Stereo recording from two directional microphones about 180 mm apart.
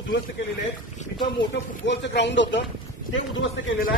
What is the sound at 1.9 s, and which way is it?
Speech, 75° left (ahead or behind).